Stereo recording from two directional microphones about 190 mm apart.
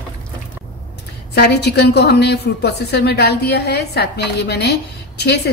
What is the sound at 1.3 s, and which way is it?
A woman's voice, 60° left (ahead or behind).